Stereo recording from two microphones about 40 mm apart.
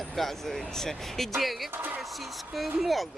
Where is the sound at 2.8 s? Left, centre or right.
Centre.